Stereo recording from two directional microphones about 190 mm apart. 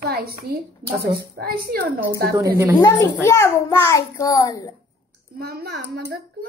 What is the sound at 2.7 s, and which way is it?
A child's voice, 15° left (ahead or behind).